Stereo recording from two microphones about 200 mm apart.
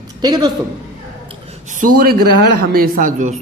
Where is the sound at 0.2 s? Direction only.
20° right (ahead or behind).